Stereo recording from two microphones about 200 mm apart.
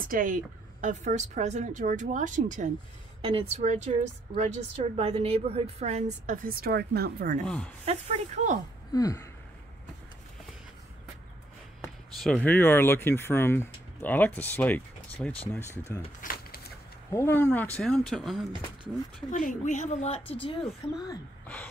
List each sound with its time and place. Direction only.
0.1 s a woman's voice: 40° right (ahead or behind)
3.2 s a woman's voice: 30° right (ahead or behind); by 7.4 s 45° right (ahead or behind)
7.4 s speech: 5° left (ahead or behind)
7.8 s a woman's voice: 35° right (ahead or behind)
8.9 s speech: 15° left (ahead or behind)
12.2 s speech: 5° left (ahead or behind)
16.2 s a sound: 50° left (ahead or behind)
17.1 s speech: 10° left (ahead or behind)
19.3 s a woman's voice: 40° left (ahead or behind)